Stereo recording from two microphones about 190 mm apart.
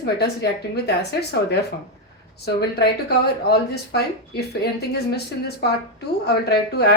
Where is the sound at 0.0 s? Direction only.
60° left (ahead or behind).